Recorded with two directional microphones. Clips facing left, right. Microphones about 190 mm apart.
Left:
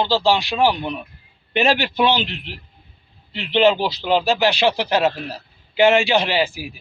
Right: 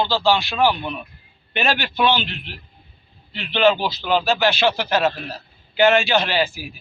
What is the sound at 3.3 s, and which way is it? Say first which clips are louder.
Speech: left 1 dB; 25° left (ahead or behind).